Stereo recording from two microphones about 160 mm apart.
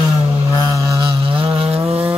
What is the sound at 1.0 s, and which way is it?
Vehicle, 35° right (ahead or behind).